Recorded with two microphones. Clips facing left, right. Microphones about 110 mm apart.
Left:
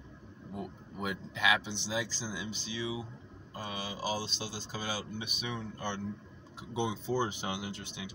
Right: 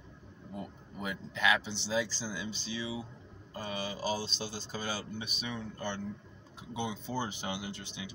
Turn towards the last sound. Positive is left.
turn(degrees=15)  # may be behind; listen again after turning